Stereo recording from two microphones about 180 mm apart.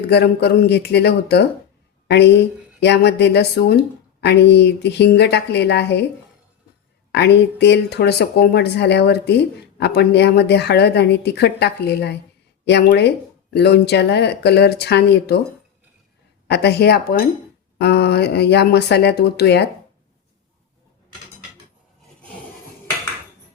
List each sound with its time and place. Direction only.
0.1 s speech: 65° left (ahead or behind)
7.1 s speech: 70° left (ahead or behind)
16.5 s speech: 65° left (ahead or behind)